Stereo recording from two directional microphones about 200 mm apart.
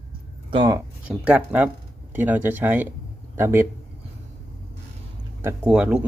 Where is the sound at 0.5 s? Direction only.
20° right (ahead or behind).